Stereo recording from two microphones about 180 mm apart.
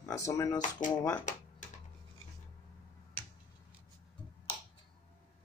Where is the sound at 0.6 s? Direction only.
45° left (ahead or behind).